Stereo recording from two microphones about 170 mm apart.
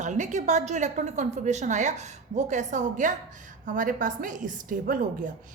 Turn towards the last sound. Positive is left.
turn(degrees=-55)  # may be behind; listen again after turning